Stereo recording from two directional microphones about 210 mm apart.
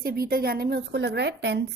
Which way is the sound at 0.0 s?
45° right (ahead or behind).